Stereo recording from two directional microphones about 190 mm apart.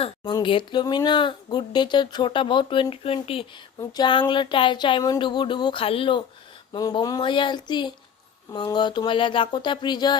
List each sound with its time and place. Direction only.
0.4 s speech: 25° left (ahead or behind)